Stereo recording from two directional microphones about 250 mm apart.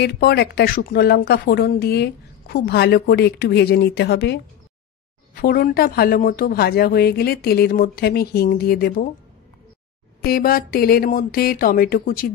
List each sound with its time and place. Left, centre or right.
0.0 s speech: left
10.2 s speech: left